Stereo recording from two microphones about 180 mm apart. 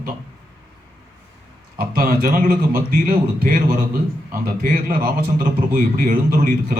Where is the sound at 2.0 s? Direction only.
50° right (ahead or behind).